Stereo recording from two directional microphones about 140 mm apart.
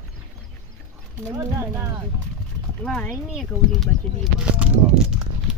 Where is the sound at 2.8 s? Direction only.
5° left (ahead or behind).